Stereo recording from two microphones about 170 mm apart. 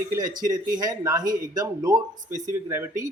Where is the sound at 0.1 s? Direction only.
20° right (ahead or behind).